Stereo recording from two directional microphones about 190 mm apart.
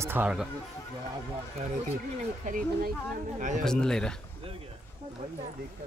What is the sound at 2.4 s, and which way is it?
Speech, 45° right (ahead or behind).